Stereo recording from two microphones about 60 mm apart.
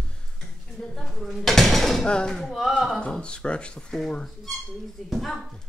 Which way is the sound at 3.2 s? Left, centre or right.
Centre.